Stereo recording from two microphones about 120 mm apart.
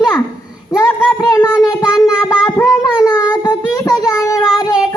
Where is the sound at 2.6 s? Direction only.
30° left (ahead or behind).